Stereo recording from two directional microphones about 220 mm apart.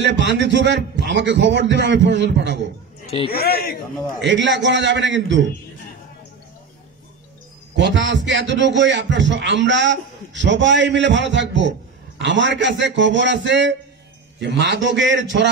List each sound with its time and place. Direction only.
0.0 s a man's voice: 50° right (ahead or behind)
3.3 s a man's voice: 45° left (ahead or behind)
4.2 s a man's voice: 55° right (ahead or behind)
7.7 s a man's voice: 55° right (ahead or behind)